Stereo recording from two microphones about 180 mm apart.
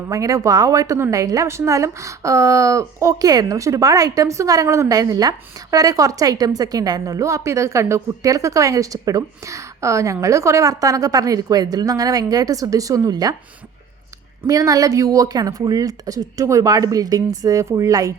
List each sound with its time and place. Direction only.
0.1 s a woman's voice: 15° right (ahead or behind)
14.4 s a woman's voice: 20° right (ahead or behind)